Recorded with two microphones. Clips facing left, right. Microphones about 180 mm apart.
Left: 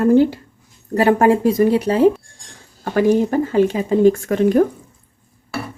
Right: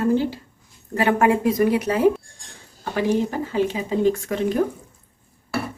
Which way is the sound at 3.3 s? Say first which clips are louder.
Left 7 dB; 50° left (ahead or behind).